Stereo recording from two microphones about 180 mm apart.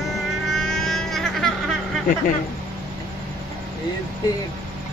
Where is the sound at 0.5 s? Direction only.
Centre (ahead or behind).